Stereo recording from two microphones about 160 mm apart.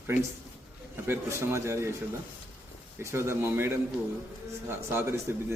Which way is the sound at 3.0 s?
15° right (ahead or behind).